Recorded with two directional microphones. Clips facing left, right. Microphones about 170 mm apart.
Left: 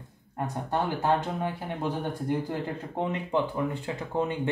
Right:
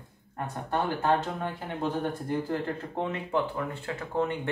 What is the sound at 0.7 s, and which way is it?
Speech, 15° left (ahead or behind).